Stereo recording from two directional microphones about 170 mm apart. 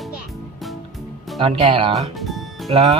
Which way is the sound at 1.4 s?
35° right (ahead or behind).